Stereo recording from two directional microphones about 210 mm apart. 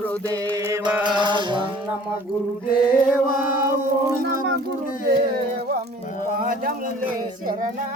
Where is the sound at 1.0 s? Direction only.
20° right (ahead or behind).